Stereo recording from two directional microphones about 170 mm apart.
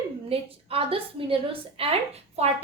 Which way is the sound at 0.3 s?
35° right (ahead or behind).